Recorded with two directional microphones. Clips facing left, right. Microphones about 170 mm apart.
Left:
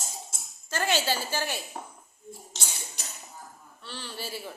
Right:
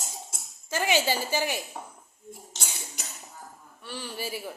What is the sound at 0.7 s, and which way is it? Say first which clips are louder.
Speech: right 2 dB; 15° right (ahead or behind).